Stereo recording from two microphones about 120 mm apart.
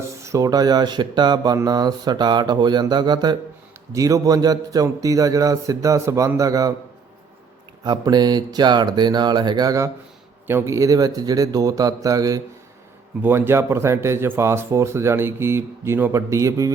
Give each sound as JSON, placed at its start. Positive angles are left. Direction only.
{"t": 0.2, "sound": "speech", "side_deg": -25}
{"t": 7.9, "sound": "speech", "side_deg": -35}
{"t": 13.2, "sound": "speech", "side_deg": -20}